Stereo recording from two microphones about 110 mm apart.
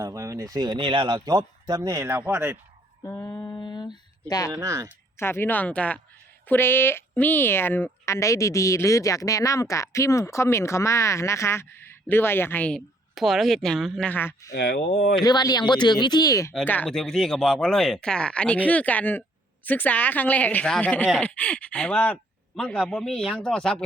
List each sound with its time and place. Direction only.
0.0 s speech: 30° right (ahead or behind); by 1.2 s 50° right (ahead or behind)
1.2 s speech: 35° right (ahead or behind)
2.2 s speech: 15° right (ahead or behind)
3.0 s a sound: 30° left (ahead or behind)
4.6 s speech: 30° right (ahead or behind)
5.1 s speech: 20° left (ahead or behind)
12.7 s speech: centre (ahead or behind)
14.1 s speech: 20° left (ahead or behind)
15.1 s speech: 40° left (ahead or behind)
16.6 s speech: 15° left (ahead or behind)
16.9 s speech: 5° left (ahead or behind)